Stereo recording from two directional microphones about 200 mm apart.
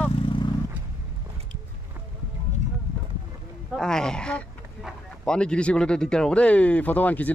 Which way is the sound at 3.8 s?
5° left (ahead or behind).